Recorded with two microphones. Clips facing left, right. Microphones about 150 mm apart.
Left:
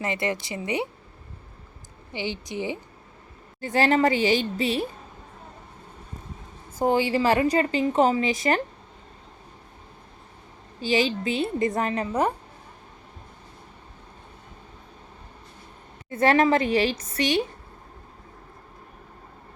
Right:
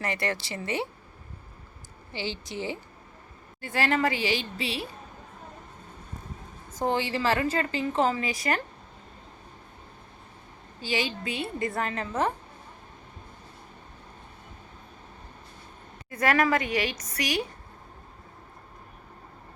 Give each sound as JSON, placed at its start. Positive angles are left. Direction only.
{"t": 0.0, "sound": "a woman's voice", "side_deg": 20}
{"t": 2.1, "sound": "a woman's voice", "side_deg": 20}
{"t": 4.2, "sound": "a woman's voice", "side_deg": 45}
{"t": 6.7, "sound": "a woman's voice", "side_deg": 10}
{"t": 10.8, "sound": "a woman's voice", "side_deg": 25}
{"t": 16.0, "sound": "a woman's voice", "side_deg": 30}